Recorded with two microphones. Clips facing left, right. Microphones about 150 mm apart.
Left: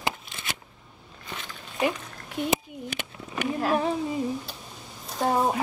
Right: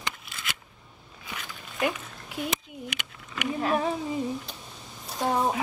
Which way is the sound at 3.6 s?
Centre (ahead or behind).